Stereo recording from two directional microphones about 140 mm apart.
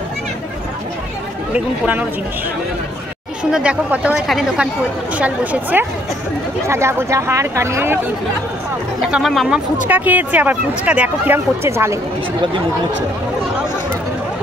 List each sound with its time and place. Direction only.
1.5 s speech: 10° right (ahead or behind)
3.5 s speech: 10° right (ahead or behind)
9.1 s speech: centre (ahead or behind)
9.8 s speech: 10° right (ahead or behind)